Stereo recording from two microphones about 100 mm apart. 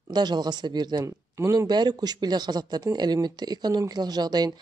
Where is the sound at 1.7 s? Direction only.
45° right (ahead or behind).